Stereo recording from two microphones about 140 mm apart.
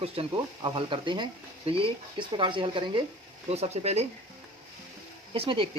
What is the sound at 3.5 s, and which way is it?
Speech, 50° right (ahead or behind).